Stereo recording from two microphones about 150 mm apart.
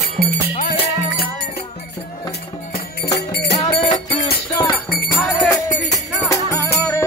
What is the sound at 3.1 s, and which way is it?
Music, 90° left.